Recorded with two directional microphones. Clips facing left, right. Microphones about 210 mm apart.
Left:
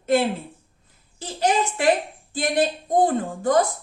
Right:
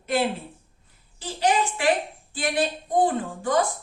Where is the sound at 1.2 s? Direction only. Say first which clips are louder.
Left 1 dB; 45° left (ahead or behind).